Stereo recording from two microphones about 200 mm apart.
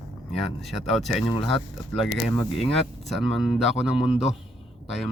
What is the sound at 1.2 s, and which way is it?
Speech, 25° left (ahead or behind).